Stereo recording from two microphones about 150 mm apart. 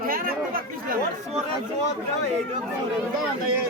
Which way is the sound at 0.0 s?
75° right (ahead or behind).